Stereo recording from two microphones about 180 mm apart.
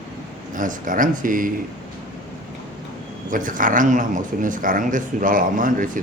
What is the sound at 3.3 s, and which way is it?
Speech, 50° right (ahead or behind).